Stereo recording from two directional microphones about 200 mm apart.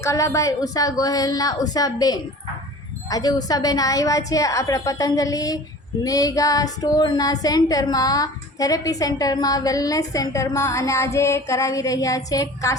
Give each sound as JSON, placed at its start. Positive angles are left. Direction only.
{"t": 0.0, "sound": "female singing", "side_deg": 15}